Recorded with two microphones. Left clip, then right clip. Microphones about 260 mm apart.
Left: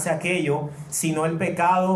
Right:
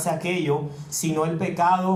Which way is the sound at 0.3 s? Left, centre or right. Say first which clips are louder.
Left 1 dB; right.